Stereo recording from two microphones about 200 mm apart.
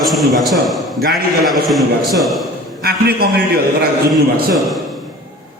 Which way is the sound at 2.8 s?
50° right (ahead or behind).